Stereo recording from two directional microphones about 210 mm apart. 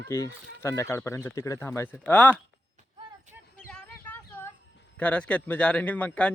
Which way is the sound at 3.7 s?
5° left (ahead or behind).